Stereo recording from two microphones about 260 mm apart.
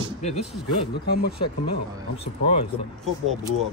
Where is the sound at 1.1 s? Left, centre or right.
Left.